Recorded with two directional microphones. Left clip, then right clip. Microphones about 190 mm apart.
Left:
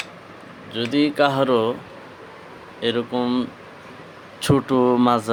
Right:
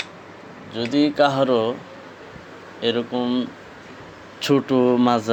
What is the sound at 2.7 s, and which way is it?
Speech, 15° left (ahead or behind).